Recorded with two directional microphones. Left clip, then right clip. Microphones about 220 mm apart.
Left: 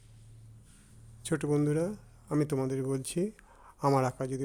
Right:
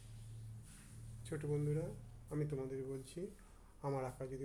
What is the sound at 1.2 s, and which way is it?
Speech, 50° left (ahead or behind).